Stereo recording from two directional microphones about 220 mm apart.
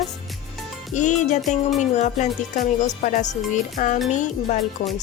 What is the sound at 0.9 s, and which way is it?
Speech, 35° left (ahead or behind).